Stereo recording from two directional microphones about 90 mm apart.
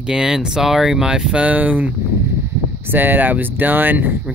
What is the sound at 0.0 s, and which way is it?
Speech, 5° right (ahead or behind).